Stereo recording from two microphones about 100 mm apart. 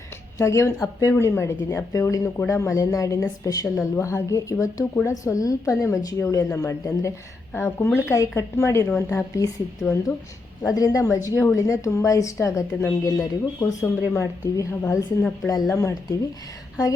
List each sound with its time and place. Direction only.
0.3 s a woman's voice: 30° left (ahead or behind)
15.4 s a woman's voice: 35° left (ahead or behind)